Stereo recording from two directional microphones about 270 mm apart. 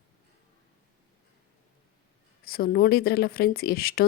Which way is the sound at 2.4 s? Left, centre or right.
Left.